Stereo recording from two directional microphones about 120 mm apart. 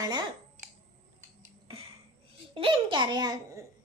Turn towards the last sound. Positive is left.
turn(degrees=-35)  # may be behind; listen again after turning